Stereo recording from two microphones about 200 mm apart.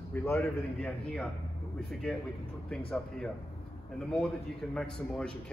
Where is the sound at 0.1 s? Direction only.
15° left (ahead or behind).